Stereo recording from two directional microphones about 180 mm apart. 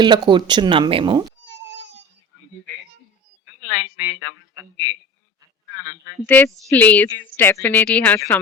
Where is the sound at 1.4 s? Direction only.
85° right.